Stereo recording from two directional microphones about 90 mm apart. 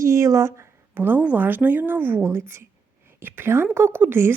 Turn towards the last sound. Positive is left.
turn(degrees=-25)  # may be behind; listen again after turning